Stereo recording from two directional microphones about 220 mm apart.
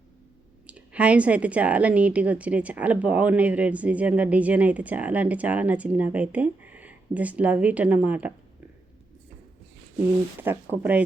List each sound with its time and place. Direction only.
0.7 s a woman's voice: 5° right (ahead or behind)
10.4 s a woman's voice: 10° right (ahead or behind)